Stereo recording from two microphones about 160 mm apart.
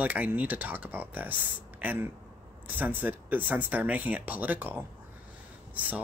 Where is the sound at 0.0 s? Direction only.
10° right (ahead or behind).